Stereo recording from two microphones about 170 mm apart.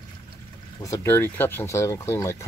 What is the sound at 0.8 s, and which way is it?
Speech, 15° left (ahead or behind).